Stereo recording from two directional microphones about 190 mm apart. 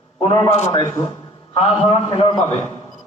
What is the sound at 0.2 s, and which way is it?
Speech, 25° left (ahead or behind).